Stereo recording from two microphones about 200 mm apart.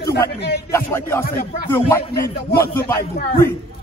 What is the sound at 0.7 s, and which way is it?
Speech, 10° left (ahead or behind).